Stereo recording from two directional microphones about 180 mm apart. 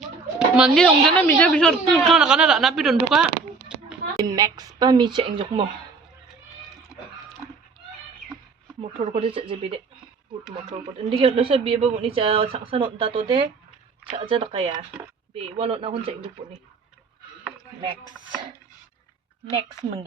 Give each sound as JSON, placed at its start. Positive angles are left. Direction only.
{"t": 0.3, "sound": "a woman's voice", "side_deg": -5}
{"t": 4.2, "sound": "speech", "side_deg": -20}
{"t": 8.8, "sound": "speech", "side_deg": -35}